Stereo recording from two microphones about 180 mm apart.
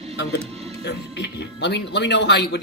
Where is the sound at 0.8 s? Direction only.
70° left (ahead or behind).